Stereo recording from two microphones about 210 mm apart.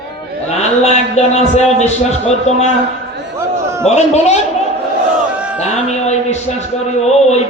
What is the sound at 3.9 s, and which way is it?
Speech, 30° left (ahead or behind).